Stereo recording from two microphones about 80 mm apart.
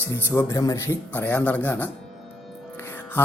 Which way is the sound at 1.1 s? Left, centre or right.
Left.